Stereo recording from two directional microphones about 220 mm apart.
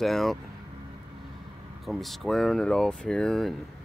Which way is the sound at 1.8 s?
Centre (ahead or behind).